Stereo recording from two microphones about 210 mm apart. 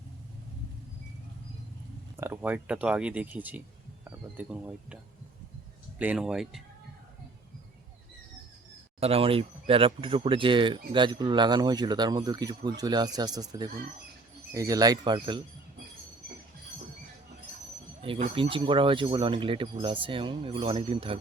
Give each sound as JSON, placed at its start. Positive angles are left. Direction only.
{"t": 2.1, "sound": "speech", "side_deg": -10}
{"t": 6.0, "sound": "speech", "side_deg": -5}
{"t": 9.0, "sound": "speech", "side_deg": -30}
{"t": 18.0, "sound": "speech", "side_deg": -25}